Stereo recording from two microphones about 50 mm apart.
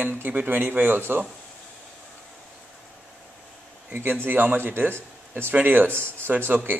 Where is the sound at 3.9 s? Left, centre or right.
Right.